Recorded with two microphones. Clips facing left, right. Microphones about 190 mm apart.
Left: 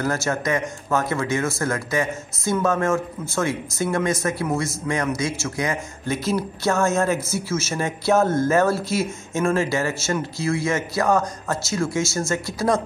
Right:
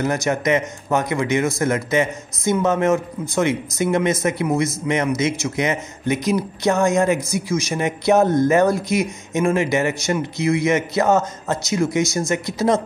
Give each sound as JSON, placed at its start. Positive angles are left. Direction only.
{"t": 0.0, "sound": "speech", "side_deg": -20}